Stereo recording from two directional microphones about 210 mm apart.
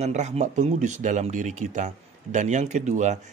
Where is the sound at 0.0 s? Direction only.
35° right (ahead or behind).